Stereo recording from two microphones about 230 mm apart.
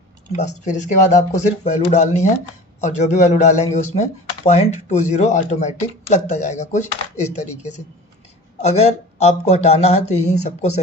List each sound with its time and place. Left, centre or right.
0.3 s speech: left